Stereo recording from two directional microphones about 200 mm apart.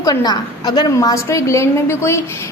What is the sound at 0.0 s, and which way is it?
A woman's voice, 20° left (ahead or behind).